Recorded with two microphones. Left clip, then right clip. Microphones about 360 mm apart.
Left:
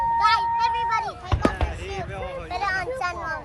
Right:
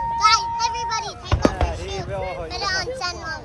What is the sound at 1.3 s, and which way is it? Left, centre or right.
Chop, centre.